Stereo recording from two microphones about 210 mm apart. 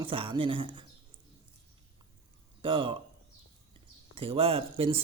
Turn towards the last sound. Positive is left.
turn(degrees=-25)  # may be behind; listen again after turning